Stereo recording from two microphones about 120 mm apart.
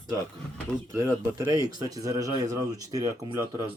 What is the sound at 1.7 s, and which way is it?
Speech, 30° right (ahead or behind).